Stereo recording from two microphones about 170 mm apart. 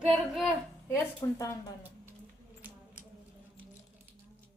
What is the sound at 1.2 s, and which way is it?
Speech, 20° left (ahead or behind).